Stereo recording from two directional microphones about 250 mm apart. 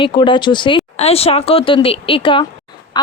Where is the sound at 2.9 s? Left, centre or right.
Centre.